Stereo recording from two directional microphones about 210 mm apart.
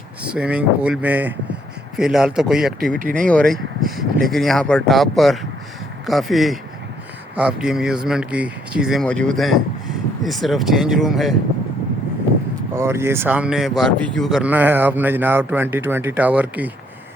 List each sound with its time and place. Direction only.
0.2 s speech: 5° right (ahead or behind)
3.0 s speech: 40° right (ahead or behind)
3.2 s speech: 5° left (ahead or behind)
12.7 s speech: 10° right (ahead or behind)